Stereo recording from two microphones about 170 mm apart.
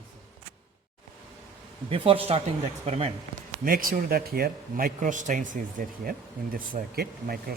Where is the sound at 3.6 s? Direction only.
55° right (ahead or behind).